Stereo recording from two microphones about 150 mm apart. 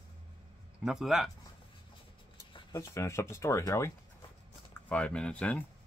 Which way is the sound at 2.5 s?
20° left (ahead or behind).